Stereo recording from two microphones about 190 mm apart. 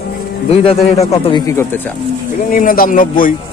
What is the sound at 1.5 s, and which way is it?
Speech, 15° left (ahead or behind).